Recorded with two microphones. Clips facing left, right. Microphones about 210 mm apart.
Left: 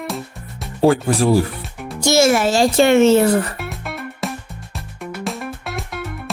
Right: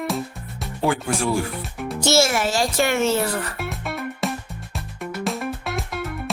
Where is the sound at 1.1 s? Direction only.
35° left (ahead or behind).